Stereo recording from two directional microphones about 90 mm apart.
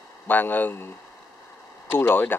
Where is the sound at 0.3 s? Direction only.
20° left (ahead or behind).